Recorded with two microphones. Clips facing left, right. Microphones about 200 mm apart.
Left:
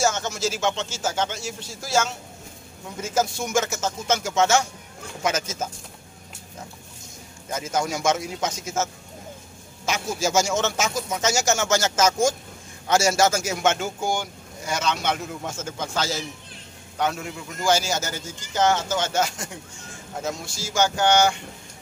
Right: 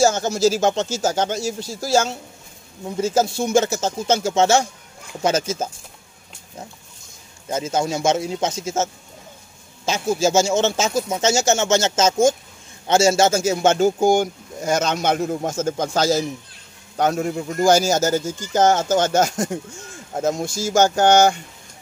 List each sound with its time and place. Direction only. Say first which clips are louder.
0.0 s speech: right 7 dB; 35° right (ahead or behind)
7.5 s speech: right 4 dB; 25° right (ahead or behind); by 21.4 s 45° right (ahead or behind)